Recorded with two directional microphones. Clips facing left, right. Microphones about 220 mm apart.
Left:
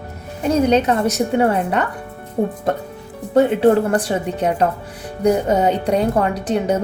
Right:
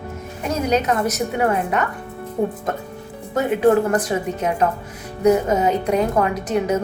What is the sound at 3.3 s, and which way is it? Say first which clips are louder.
A woman's voice: left 3 dB; 30° left (ahead or behind).